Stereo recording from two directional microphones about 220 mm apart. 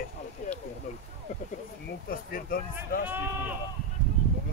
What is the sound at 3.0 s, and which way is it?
Speech, 10° right (ahead or behind).